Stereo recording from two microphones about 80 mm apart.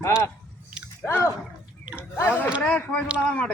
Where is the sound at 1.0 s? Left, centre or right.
Left.